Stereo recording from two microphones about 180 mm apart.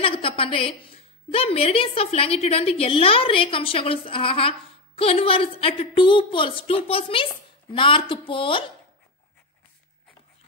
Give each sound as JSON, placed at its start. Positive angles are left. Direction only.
{"t": 0.0, "sound": "a woman's voice", "side_deg": 30}